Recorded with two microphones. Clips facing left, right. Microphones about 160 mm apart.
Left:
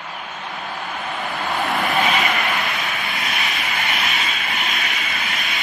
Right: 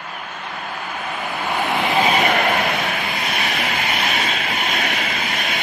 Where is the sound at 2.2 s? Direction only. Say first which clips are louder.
Right 5 dB; 45° right (ahead or behind).